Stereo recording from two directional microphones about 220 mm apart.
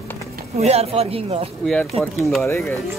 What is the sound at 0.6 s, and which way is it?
Speech, 30° right (ahead or behind).